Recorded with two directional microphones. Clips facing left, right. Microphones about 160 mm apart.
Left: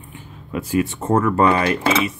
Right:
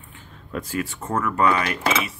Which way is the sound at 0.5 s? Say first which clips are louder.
Left 5 dB; 5° left (ahead or behind).